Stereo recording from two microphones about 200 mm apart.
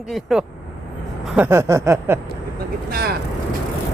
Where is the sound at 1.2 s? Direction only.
10° right (ahead or behind).